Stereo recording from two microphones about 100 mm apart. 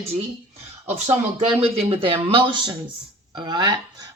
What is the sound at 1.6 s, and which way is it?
Speech, 80° right.